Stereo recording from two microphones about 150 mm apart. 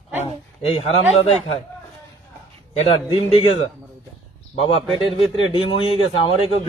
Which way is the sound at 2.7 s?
35° left (ahead or behind).